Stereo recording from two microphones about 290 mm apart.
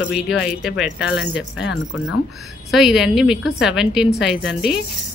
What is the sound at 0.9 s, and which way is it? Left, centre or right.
Speech, left.